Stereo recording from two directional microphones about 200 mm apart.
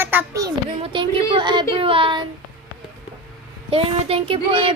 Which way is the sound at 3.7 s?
30° right (ahead or behind).